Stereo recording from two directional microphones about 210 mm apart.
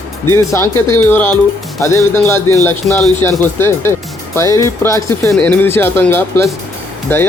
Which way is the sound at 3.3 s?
10° left (ahead or behind).